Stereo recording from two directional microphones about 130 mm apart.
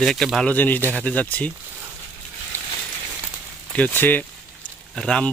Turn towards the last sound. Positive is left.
turn(degrees=5)  # may be behind; listen again after turning